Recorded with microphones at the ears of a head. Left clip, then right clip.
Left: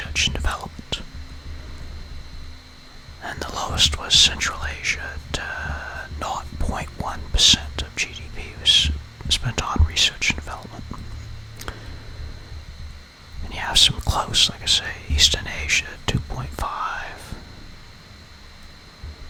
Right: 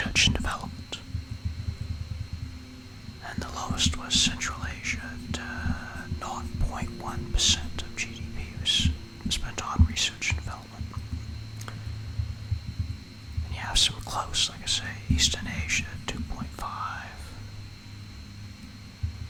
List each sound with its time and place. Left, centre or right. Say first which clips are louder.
0.1 s whispering: left 2 dB; centre
3.4 s whispering: left 9 dB; left
13.5 s whispering: left 8 dB; left